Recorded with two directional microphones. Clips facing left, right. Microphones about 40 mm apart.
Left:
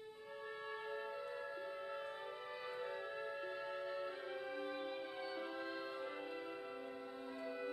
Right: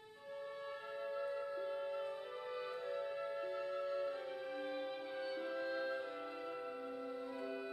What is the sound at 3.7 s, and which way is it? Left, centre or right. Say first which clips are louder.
Music: right 5 dB; centre.